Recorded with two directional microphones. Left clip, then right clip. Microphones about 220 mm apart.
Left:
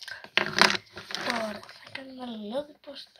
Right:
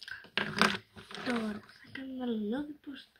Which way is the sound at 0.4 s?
25° left (ahead or behind).